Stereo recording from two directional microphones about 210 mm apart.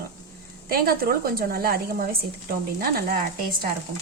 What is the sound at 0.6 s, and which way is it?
A woman's voice, 45° right (ahead or behind).